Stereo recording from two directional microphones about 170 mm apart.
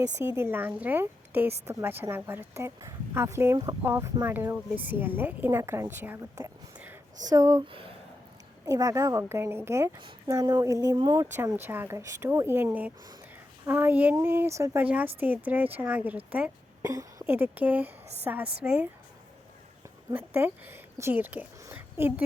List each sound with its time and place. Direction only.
0.0 s speech: 15° right (ahead or behind)
7.7 s speech: 30° right (ahead or behind)
8.6 s speech: 20° right (ahead or behind)
16.8 s speech: 20° right (ahead or behind)
20.1 s speech: 10° right (ahead or behind)